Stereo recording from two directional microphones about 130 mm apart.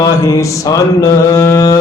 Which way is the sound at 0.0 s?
25° left (ahead or behind).